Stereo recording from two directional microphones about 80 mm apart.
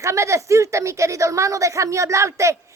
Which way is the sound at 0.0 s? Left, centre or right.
Right.